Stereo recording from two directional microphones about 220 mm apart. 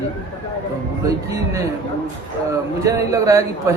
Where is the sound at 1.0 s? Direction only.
15° right (ahead or behind).